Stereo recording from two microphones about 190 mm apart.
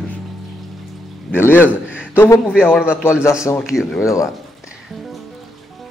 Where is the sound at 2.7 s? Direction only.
5° right (ahead or behind).